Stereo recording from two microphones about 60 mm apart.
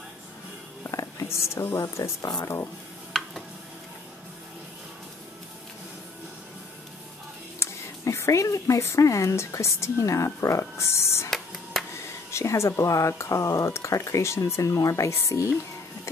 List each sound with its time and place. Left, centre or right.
0.8 s a sound: left
2.2 s speech: left
3.1 s a sound: centre
7.5 s speech: left
11.2 s music: centre
12.3 s speech: left